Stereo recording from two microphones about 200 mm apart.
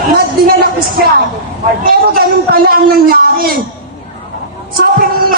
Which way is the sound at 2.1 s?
50° right (ahead or behind).